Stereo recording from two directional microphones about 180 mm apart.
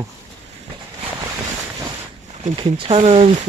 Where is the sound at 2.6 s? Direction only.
30° right (ahead or behind).